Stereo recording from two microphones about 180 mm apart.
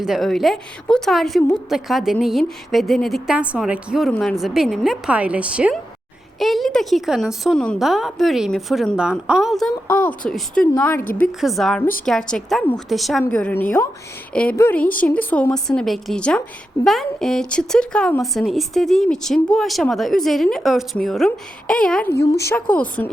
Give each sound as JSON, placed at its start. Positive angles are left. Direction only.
{"t": 0.0, "sound": "speech", "side_deg": 0}
{"t": 9.8, "sound": "a woman's voice", "side_deg": 10}
{"t": 11.3, "sound": "a woman's voice", "side_deg": 0}
{"t": 22.1, "sound": "a woman's voice", "side_deg": 65}
{"t": 22.7, "sound": "a woman's voice", "side_deg": 10}